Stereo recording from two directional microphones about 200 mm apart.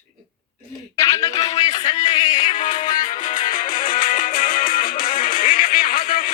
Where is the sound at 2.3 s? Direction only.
40° left (ahead or behind).